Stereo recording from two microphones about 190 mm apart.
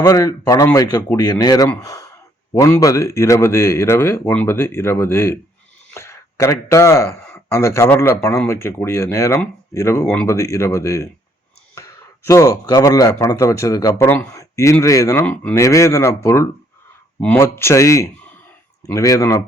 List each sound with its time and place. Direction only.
0.0 s speech: 20° left (ahead or behind)